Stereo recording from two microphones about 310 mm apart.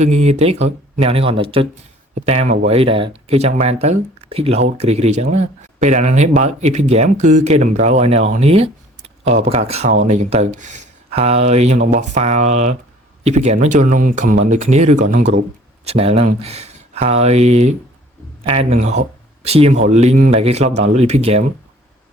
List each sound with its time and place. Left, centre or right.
0.0 s speech: right